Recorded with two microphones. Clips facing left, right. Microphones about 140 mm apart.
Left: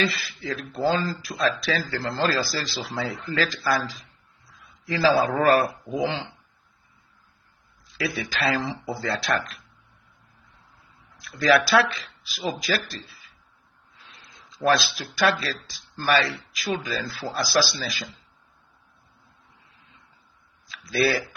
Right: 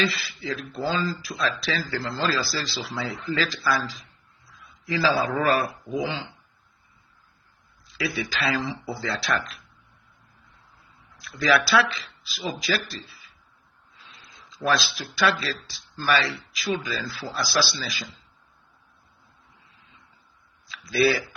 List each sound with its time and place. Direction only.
0.0 s speech: 50° left (ahead or behind)
5.2 s speech: 50° left (ahead or behind)
8.1 s speech: 45° left (ahead or behind)
11.2 s speech: 50° left (ahead or behind)
14.6 s speech: 50° left (ahead or behind)
20.9 s speech: 50° left (ahead or behind)